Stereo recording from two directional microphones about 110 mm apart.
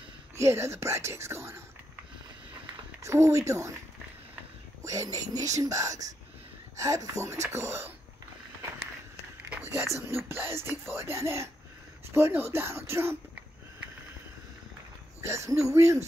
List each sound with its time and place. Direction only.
0.4 s speech: 25° right (ahead or behind)
3.0 s speech: 30° right (ahead or behind)
4.8 s speech: 30° right (ahead or behind)
9.9 s speech: 25° right (ahead or behind)
15.2 s speech: 25° right (ahead or behind)